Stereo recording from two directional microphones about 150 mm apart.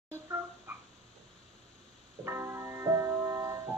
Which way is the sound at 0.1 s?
15° right (ahead or behind).